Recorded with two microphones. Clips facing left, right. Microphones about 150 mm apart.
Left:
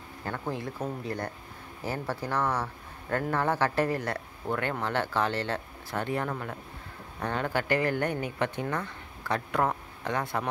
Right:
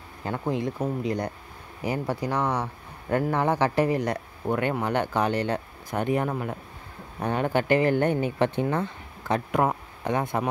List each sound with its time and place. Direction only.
0.2 s speech: 20° right (ahead or behind)